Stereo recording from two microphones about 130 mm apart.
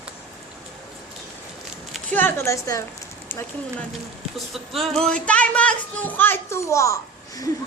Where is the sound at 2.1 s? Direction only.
20° left (ahead or behind).